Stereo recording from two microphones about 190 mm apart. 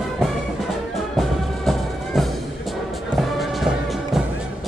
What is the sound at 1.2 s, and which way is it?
Music, centre (ahead or behind).